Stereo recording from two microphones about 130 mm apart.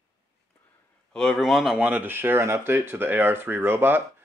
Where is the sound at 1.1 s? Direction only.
Centre (ahead or behind).